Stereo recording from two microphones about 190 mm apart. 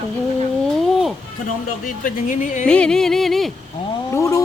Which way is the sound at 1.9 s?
45° left (ahead or behind).